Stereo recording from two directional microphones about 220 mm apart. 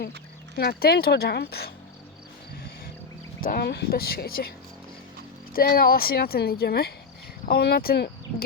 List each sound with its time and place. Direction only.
0.5 s speech: 45° left (ahead or behind)
3.4 s speech: 45° left (ahead or behind)
5.5 s speech: 40° left (ahead or behind)